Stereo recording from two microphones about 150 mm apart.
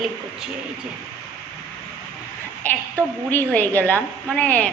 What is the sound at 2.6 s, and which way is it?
A woman's voice, 10° left (ahead or behind).